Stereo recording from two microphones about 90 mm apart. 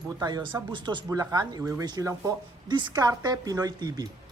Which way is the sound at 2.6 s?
60° right (ahead or behind).